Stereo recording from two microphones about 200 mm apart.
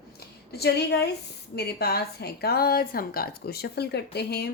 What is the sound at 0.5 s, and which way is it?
A woman's voice, 55° left (ahead or behind).